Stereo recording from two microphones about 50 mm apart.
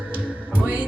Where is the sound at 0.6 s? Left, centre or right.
Right.